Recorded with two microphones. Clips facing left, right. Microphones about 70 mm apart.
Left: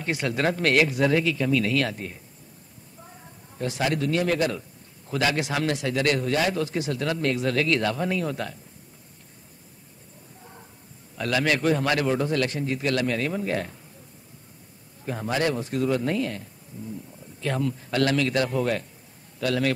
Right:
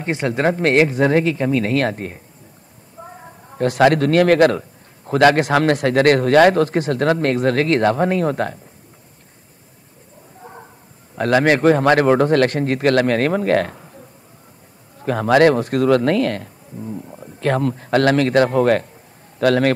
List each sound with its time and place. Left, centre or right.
0.0 s a man's voice: right
10.4 s a sound: right
11.1 s speech: right
15.0 s a man's voice: right